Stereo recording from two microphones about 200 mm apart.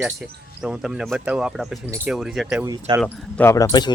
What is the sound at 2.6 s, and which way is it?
Speech, 20° right (ahead or behind).